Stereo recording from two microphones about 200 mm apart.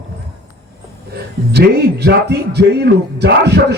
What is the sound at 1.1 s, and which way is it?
A man's voice, 55° right (ahead or behind).